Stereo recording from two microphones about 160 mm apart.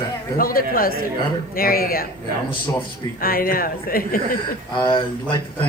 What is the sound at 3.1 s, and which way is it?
Speech, 65° left (ahead or behind).